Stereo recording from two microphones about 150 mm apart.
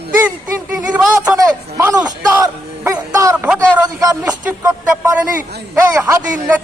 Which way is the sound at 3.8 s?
25° right (ahead or behind).